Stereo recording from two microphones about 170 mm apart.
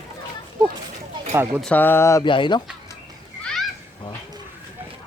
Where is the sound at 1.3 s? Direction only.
15° right (ahead or behind).